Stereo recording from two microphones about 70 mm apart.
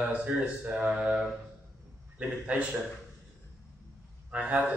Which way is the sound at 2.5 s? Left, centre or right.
Centre.